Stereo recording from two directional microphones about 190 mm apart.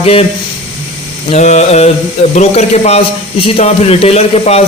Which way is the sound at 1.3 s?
35° left (ahead or behind).